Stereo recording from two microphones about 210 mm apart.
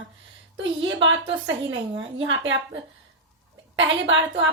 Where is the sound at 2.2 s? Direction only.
65° right (ahead or behind).